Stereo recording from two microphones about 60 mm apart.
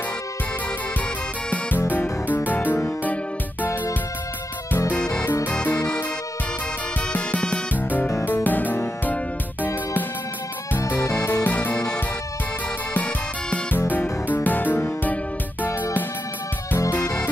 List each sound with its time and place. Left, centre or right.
1.8 s music: left
4.9 s music: centre
5.2 s music: left
5.5 s music: left
7.1 s music: left
11.4 s music: left
12.9 s music: left
17.0 s music: centre